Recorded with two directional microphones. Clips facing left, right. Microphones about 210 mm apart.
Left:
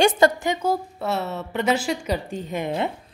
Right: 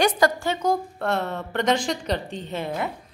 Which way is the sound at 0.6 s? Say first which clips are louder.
Even; 5° left (ahead or behind).